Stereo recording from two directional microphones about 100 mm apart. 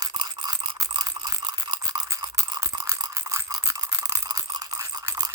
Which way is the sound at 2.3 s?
35° right (ahead or behind).